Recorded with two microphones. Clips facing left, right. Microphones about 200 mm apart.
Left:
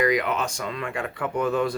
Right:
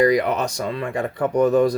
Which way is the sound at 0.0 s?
35° right (ahead or behind).